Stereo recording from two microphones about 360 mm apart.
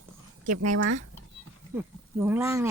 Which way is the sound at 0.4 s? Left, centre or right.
Right.